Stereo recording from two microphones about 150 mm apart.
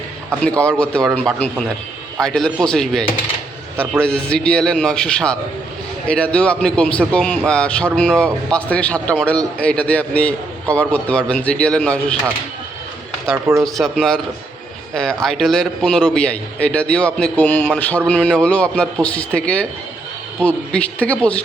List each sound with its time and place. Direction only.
0.4 s a man's voice: 10° left (ahead or behind)
13.3 s speech: 20° right (ahead or behind)
13.7 s a man's voice: centre (ahead or behind)